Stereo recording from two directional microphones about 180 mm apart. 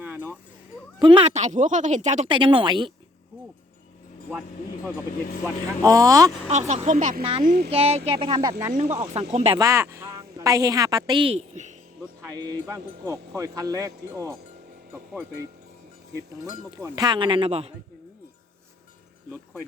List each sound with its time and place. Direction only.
0.0 s a sound: 10° right (ahead or behind)
0.9 s speech: 30° right (ahead or behind)
2.3 s speech: 30° right (ahead or behind)
5.8 s speech: 20° right (ahead or behind)
6.5 s speech: 40° right (ahead or behind)
7.2 s speech: 30° right (ahead or behind)
7.4 s speech: 60° right (ahead or behind)
7.7 s speech: 35° right (ahead or behind)
8.8 s speech: 40° right (ahead or behind)
9.6 s a woman's voice: 15° right (ahead or behind); by 11.8 s 40° right (ahead or behind)
12.6 s speech: 15° right (ahead or behind)
16.4 s speech: 20° right (ahead or behind)